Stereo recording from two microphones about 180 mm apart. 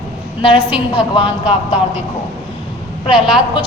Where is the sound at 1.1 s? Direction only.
30° left (ahead or behind).